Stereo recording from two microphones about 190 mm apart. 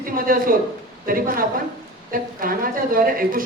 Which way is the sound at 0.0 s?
50° right (ahead or behind).